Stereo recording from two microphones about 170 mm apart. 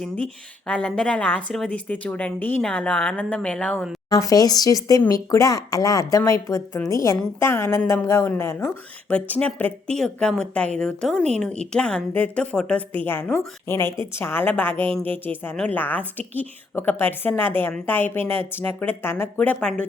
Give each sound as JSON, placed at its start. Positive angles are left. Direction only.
{"t": 0.7, "sound": "speech", "side_deg": 5}
{"t": 4.1, "sound": "speech", "side_deg": 20}